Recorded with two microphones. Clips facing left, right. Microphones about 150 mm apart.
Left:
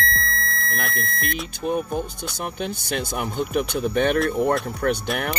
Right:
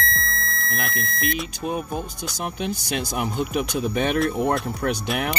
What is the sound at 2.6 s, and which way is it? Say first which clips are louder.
Speech: even; 5° right (ahead or behind).